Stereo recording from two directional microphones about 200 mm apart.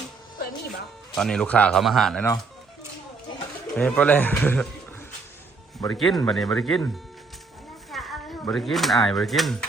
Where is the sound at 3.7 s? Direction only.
5° left (ahead or behind).